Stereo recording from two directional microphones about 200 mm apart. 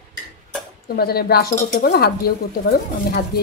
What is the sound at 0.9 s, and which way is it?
A woman's voice, 50° left (ahead or behind).